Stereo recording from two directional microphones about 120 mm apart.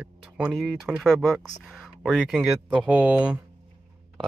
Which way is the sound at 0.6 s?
Centre (ahead or behind).